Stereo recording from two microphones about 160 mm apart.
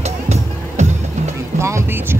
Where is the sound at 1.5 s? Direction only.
15° right (ahead or behind).